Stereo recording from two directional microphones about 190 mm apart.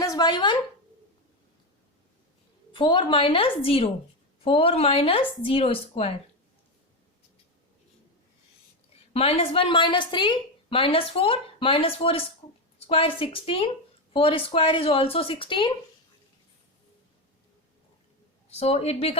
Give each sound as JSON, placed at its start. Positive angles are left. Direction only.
{"t": 0.0, "sound": "speech", "side_deg": 20}
{"t": 2.7, "sound": "a woman's voice", "side_deg": 25}
{"t": 9.1, "sound": "a woman's voice", "side_deg": 30}
{"t": 18.5, "sound": "speech", "side_deg": 35}